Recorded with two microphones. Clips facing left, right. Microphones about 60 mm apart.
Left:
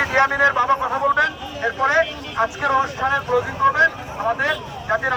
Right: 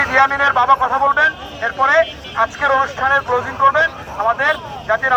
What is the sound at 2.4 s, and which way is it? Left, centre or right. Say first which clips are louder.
Speech: right 4 dB; right.